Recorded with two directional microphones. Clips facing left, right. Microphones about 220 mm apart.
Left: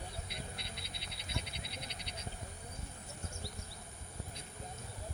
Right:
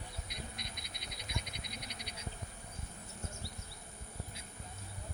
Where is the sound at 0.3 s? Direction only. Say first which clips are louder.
Left 1 dB; 15° right (ahead or behind).